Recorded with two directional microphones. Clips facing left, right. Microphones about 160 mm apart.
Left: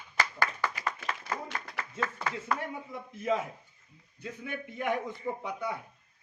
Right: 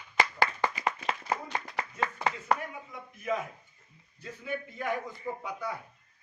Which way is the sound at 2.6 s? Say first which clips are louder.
Left 3 dB; 25° left (ahead or behind).